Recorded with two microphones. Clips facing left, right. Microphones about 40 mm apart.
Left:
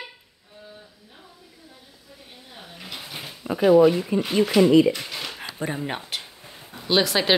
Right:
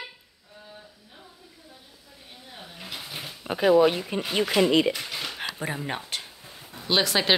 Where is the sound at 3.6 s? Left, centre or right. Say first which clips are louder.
Left 4 dB; right.